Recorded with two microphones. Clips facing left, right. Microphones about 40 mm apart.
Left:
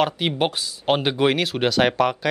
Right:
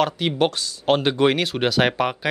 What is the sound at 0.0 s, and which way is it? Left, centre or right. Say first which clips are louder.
Speech: right 1 dB; centre.